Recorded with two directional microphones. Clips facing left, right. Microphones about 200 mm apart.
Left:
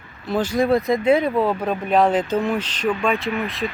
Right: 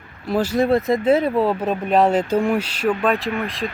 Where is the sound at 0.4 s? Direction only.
5° right (ahead or behind).